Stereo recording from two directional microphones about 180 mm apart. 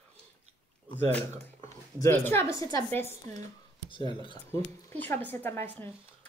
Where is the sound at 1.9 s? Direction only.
15° left (ahead or behind).